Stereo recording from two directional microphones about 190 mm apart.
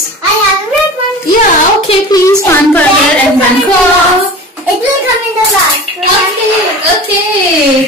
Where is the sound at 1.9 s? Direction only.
20° left (ahead or behind).